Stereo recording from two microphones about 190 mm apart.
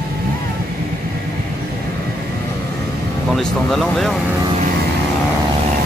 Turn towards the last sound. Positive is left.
turn(degrees=0)  # may be behind; listen again after turning